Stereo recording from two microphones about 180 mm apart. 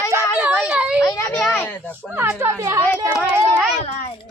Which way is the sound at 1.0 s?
15° left (ahead or behind).